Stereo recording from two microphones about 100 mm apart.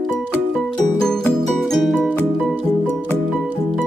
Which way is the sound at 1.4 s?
Centre (ahead or behind).